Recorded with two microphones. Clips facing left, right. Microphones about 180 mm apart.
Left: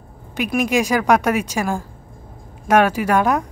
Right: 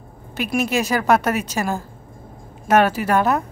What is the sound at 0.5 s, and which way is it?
Speech, 10° left (ahead or behind).